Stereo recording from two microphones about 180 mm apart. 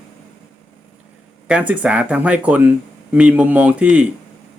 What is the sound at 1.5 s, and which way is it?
Speech, 5° right (ahead or behind).